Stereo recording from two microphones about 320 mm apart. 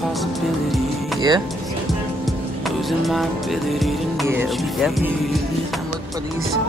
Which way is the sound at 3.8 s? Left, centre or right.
Centre.